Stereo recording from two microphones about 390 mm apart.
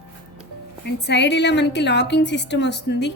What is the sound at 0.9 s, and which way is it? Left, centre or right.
Speech, left.